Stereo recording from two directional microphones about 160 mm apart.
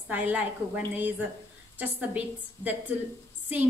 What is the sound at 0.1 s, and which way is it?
A woman's voice, 10° right (ahead or behind).